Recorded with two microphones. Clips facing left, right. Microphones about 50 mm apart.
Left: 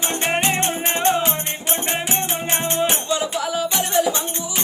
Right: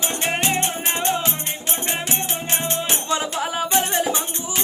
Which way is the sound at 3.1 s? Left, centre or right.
Right.